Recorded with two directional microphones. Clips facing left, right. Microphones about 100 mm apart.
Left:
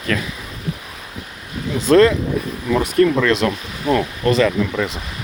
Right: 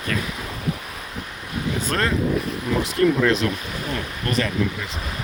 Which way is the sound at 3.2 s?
75° left (ahead or behind).